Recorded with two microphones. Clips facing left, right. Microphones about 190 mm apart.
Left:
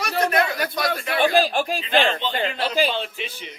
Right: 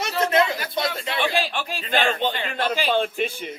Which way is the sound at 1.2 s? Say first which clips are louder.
Left 6 dB; 40° left (ahead or behind).